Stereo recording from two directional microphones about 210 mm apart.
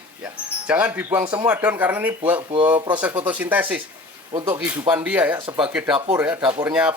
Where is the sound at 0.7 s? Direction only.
5° right (ahead or behind).